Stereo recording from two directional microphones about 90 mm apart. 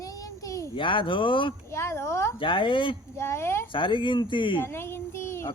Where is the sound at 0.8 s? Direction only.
70° left (ahead or behind).